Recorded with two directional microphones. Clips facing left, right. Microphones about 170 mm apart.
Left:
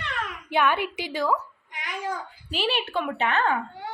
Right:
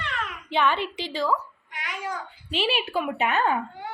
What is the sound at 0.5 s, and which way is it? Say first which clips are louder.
Speech: left 1 dB; 10° left (ahead or behind).